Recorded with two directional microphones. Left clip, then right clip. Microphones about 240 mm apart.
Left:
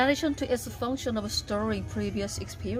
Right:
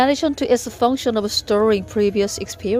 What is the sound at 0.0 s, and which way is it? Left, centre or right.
A woman's voice, right.